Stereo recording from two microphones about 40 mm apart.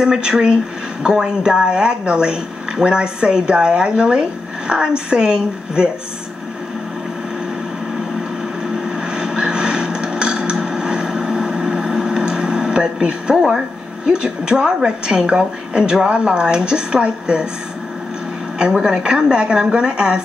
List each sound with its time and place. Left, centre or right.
0.0 s a woman's voice: centre
8.8 s a sound: centre
14.0 s a woman's voice: right
18.6 s a woman's voice: right